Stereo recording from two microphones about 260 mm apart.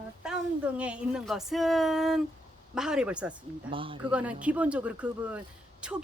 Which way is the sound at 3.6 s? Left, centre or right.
Centre.